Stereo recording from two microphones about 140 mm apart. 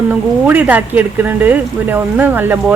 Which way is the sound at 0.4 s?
10° right (ahead or behind).